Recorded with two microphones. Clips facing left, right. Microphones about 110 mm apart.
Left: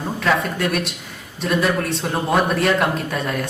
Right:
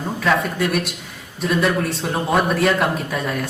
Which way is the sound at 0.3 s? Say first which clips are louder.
Right 1 dB; centre (ahead or behind).